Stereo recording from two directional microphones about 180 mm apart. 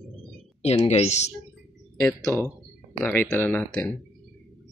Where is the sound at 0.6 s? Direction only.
35° left (ahead or behind).